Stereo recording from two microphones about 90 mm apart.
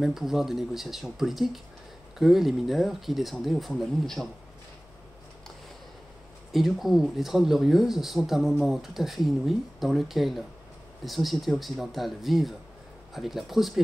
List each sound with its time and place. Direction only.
0.0 s speech: 5° right (ahead or behind)
6.5 s speech: centre (ahead or behind)